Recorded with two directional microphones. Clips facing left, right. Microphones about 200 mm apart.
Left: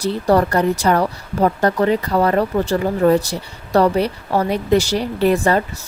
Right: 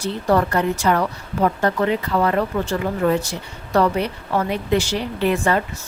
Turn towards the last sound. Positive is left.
turn(degrees=35)  # may be behind; listen again after turning